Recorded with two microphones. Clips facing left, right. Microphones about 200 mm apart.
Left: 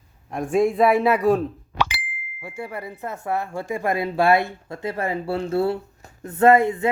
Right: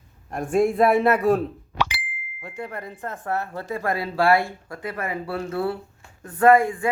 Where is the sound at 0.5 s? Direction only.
Centre (ahead or behind).